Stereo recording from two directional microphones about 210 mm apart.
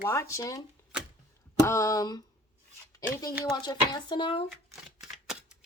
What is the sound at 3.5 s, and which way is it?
Speech, 20° left (ahead or behind).